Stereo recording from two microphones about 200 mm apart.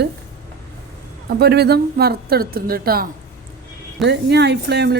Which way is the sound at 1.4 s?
55° right (ahead or behind).